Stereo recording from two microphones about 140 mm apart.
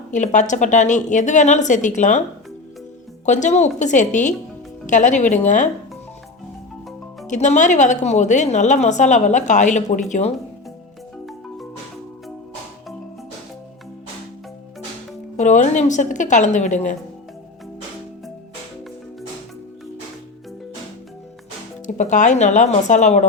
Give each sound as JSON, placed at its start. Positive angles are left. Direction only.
{"t": 0.1, "sound": "a woman's voice", "side_deg": 60}
{"t": 3.2, "sound": "a woman's voice", "side_deg": 60}
{"t": 7.3, "sound": "a woman's voice", "side_deg": 60}
{"t": 11.3, "sound": "music", "side_deg": 0}
{"t": 15.4, "sound": "a woman's voice", "side_deg": 60}
{"t": 21.8, "sound": "a woman's voice", "side_deg": 60}